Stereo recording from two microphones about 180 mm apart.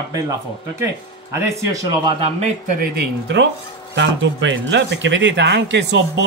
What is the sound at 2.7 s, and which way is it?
Speech, 70° right (ahead or behind).